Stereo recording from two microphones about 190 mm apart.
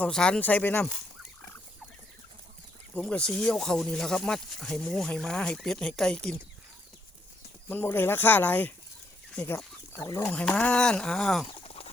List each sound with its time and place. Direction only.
0.0 s speech: 5° left (ahead or behind)
2.9 s speech: 5° left (ahead or behind)
7.7 s speech: 10° left (ahead or behind)
11.6 s a sound: 30° left (ahead or behind)